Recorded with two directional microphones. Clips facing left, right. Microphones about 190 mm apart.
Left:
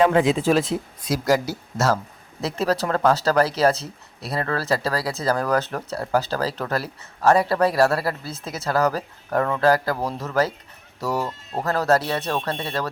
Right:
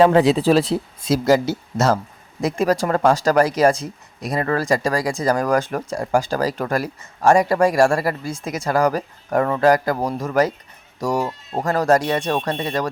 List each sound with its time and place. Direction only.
0.0 s speech: 35° right (ahead or behind); by 12.9 s 15° right (ahead or behind)